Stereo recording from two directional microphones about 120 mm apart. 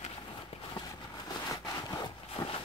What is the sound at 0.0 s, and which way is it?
Horse, 50° left (ahead or behind).